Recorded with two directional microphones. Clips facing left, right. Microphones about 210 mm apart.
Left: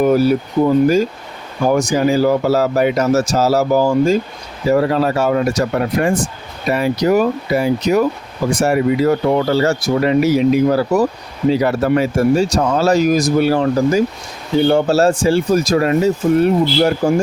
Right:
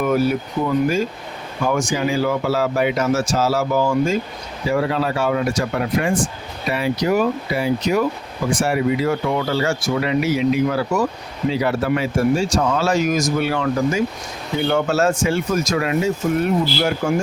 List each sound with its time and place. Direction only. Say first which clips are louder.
0.0 s speech: left 5 dB; 35° left (ahead or behind)